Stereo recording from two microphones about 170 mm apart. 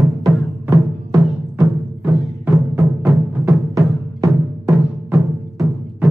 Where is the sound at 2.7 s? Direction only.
20° right (ahead or behind).